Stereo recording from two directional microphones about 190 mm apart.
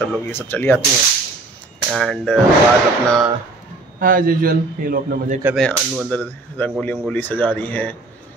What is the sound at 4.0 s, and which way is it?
A man's voice, 45° right (ahead or behind).